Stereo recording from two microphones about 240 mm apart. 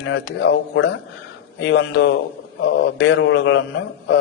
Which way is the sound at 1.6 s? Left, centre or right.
Left.